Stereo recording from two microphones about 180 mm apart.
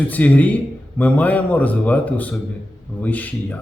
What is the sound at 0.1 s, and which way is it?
Speech, 10° left (ahead or behind).